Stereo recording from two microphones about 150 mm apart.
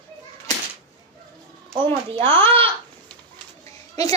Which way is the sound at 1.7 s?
35° right (ahead or behind).